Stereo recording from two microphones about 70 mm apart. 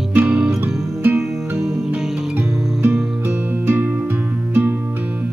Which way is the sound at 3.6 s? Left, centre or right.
Right.